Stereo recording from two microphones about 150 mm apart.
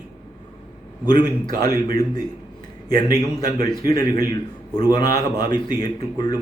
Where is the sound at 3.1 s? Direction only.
25° left (ahead or behind).